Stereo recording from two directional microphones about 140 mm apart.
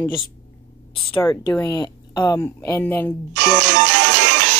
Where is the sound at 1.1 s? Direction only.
35° left (ahead or behind).